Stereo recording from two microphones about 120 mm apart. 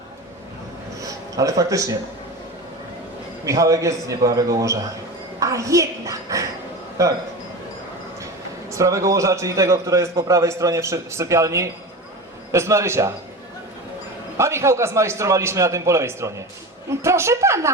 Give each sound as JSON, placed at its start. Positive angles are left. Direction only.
{"t": 1.0, "sound": "a man's voice", "side_deg": -30}
{"t": 3.4, "sound": "a man's voice", "side_deg": -25}
{"t": 8.7, "sound": "a man's voice", "side_deg": -25}
{"t": 14.3, "sound": "a man's voice", "side_deg": -25}